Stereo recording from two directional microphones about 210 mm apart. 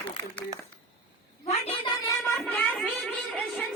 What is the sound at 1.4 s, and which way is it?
Cat, 30° left (ahead or behind).